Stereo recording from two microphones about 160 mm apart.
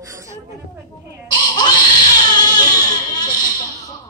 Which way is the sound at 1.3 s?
25° left (ahead or behind).